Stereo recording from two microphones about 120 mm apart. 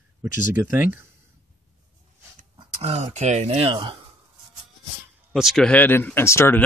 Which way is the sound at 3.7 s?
45° right (ahead or behind).